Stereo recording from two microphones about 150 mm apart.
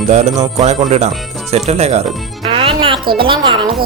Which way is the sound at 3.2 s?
35° right (ahead or behind).